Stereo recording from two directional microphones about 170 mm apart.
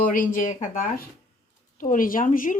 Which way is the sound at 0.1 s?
55° left (ahead or behind).